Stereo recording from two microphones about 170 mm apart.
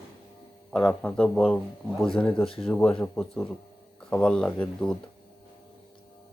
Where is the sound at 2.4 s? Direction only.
35° left (ahead or behind).